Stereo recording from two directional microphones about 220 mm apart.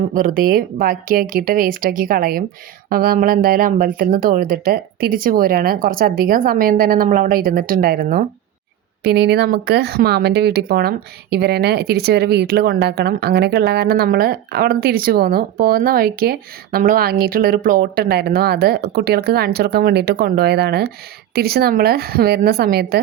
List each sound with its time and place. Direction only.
0.1 s speech: 40° right (ahead or behind)